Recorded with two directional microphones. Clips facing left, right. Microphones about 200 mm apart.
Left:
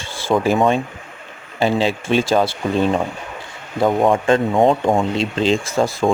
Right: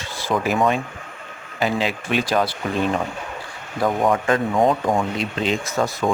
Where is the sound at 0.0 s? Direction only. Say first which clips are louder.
Left 5 dB; 30° left (ahead or behind).